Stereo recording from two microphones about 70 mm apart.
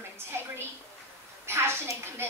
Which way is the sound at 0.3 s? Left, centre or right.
Right.